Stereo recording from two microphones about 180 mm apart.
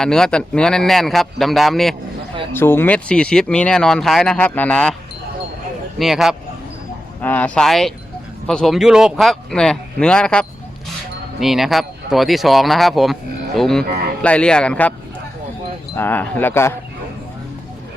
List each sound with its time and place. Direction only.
0.0 s speech: 5° left (ahead or behind)
2.5 s speech: 10° left (ahead or behind)
6.0 s speech: centre (ahead or behind)
13.8 s speech: 55° right (ahead or behind)
14.2 s speech: 5° left (ahead or behind)
16.0 s speech: 10° left (ahead or behind)